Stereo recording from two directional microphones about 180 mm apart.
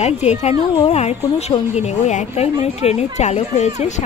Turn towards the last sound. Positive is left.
turn(degrees=40)  # may be behind; listen again after turning